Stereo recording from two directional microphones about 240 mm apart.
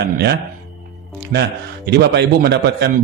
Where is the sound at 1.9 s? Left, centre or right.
Right.